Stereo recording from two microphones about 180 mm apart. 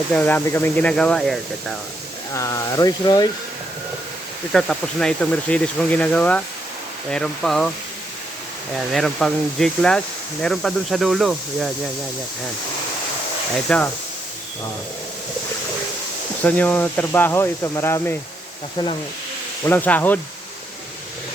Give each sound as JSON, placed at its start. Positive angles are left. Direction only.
{"t": 0.1, "sound": "speech", "side_deg": 10}
{"t": 2.3, "sound": "speech", "side_deg": 15}
{"t": 4.5, "sound": "speech", "side_deg": 5}
{"t": 8.7, "sound": "speech", "side_deg": 0}
{"t": 13.7, "sound": "speech", "side_deg": 5}
{"t": 16.4, "sound": "speech", "side_deg": 10}
{"t": 19.6, "sound": "speech", "side_deg": 10}